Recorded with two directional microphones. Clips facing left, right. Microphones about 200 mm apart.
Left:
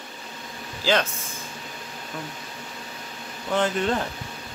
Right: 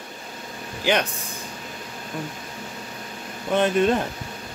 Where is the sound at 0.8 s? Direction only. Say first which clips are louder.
Right 1 dB; 15° right (ahead or behind).